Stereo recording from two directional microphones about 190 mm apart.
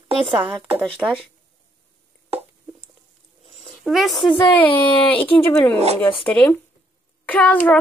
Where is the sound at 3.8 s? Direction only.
Centre (ahead or behind).